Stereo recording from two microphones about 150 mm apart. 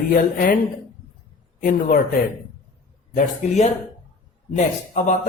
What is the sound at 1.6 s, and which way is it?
Speech, 65° left (ahead or behind).